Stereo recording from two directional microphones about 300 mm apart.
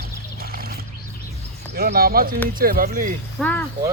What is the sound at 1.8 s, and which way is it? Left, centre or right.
Speech, right.